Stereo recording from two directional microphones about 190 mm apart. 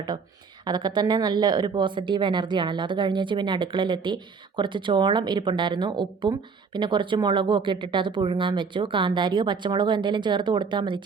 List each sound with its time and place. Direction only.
0.6 s a woman's voice: 20° right (ahead or behind)